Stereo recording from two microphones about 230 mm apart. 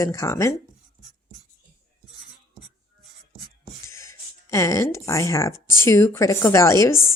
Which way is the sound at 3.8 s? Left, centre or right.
Centre.